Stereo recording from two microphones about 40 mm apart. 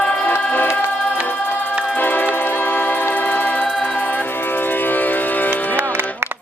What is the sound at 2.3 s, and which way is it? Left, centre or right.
Music, left.